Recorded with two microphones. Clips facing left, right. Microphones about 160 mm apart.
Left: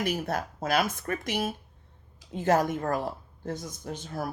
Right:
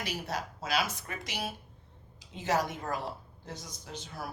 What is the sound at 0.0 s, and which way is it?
A woman's voice, 50° left (ahead or behind).